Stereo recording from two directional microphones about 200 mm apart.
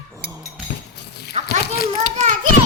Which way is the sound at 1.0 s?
55° left (ahead or behind).